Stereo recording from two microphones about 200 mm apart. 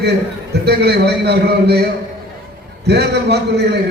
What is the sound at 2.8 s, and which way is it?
Speech, 55° right (ahead or behind).